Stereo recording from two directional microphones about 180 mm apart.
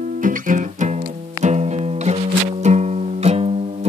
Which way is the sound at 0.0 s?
45° right (ahead or behind).